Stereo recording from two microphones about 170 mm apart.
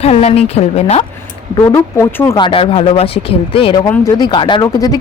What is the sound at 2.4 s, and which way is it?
Speech, 30° left (ahead or behind).